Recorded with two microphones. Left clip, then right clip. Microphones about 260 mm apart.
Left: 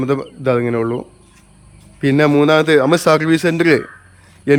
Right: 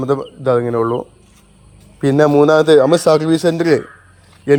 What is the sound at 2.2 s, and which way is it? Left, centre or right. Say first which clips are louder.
Speech: right 2 dB; centre.